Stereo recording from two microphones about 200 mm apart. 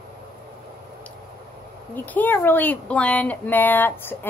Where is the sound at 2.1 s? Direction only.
10° left (ahead or behind).